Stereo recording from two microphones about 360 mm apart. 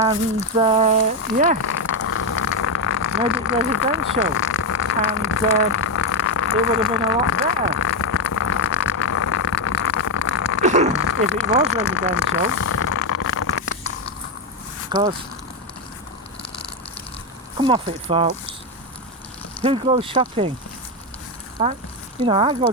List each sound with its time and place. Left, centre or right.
0.5 s speech: centre
1.6 s vehicle: left
4.3 s speech: left
7.8 s vehicle: left
10.6 s a sound: centre
10.9 s a sound: left
14.9 s speech: centre
17.6 s speech: centre
19.6 s speech: centre
21.6 s speech: centre